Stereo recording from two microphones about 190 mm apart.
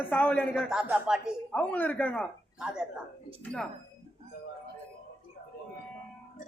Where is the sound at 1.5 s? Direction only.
10° left (ahead or behind).